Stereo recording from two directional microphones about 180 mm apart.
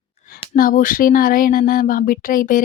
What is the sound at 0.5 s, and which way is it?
Speech, 50° left (ahead or behind).